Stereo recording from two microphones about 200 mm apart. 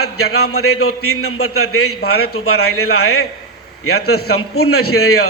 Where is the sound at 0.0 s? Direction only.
90° left.